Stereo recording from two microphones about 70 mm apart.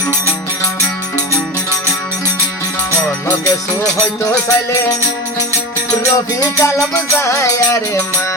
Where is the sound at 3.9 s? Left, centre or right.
Left.